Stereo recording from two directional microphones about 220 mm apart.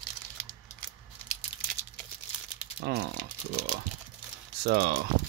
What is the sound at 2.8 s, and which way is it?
Speech, 50° right (ahead or behind).